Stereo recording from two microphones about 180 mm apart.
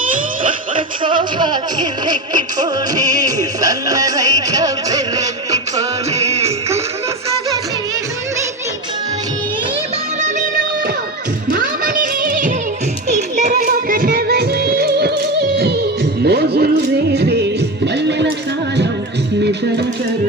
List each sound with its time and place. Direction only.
1.0 s music: 25° right (ahead or behind)
6.1 s music: 35° right (ahead or behind)
10.2 s music: 40° right (ahead or behind); by 18.3 s 70° right (ahead or behind)